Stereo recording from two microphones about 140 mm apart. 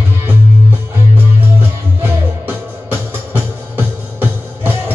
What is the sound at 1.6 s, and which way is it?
Music, 15° right (ahead or behind).